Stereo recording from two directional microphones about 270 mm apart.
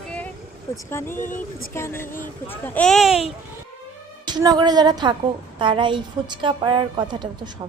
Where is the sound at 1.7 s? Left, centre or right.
Centre.